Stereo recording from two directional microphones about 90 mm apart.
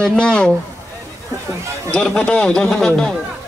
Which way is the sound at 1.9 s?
5° left (ahead or behind).